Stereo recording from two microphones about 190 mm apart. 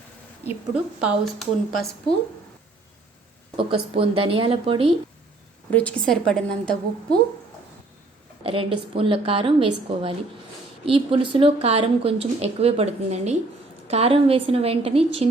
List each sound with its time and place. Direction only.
1.0 s a woman's voice: centre (ahead or behind)
3.6 s a woman's voice: 30° right (ahead or behind)
5.7 s a woman's voice: 5° left (ahead or behind)
8.4 s a woman's voice: 30° right (ahead or behind)